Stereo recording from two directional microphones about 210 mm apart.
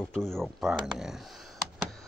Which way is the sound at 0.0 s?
5° left (ahead or behind).